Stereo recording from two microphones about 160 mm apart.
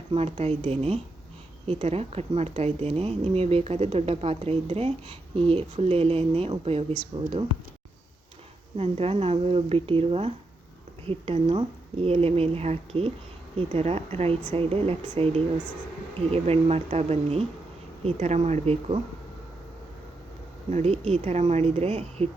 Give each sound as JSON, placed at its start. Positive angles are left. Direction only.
{"t": 0.1, "sound": "speech", "side_deg": -40}
{"t": 8.8, "sound": "speech", "side_deg": -40}
{"t": 20.7, "sound": "speech", "side_deg": -45}